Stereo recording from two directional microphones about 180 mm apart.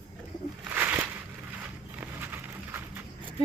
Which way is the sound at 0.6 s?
10° right (ahead or behind).